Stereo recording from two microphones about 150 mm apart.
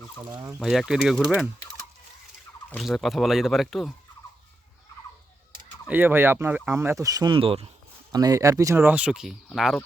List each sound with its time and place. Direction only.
0.6 s speech: centre (ahead or behind)
2.6 s speech: centre (ahead or behind)
5.9 s speech: 15° right (ahead or behind); by 7.7 s 40° right (ahead or behind)
8.1 s speech: 25° right (ahead or behind); by 9.8 s centre (ahead or behind)